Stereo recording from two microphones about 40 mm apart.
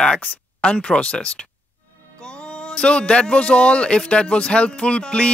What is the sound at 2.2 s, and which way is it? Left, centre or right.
Music, left.